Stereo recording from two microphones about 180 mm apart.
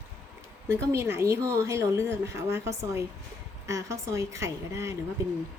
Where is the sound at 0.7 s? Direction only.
15° right (ahead or behind).